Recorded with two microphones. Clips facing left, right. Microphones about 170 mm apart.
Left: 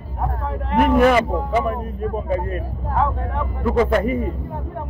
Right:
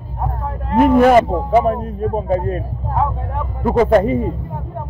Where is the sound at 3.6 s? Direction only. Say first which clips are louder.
Right 5 dB; 40° right (ahead or behind).